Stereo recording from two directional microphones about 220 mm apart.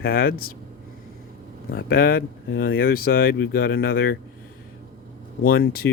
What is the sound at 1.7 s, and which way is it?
Speech, 45° left (ahead or behind).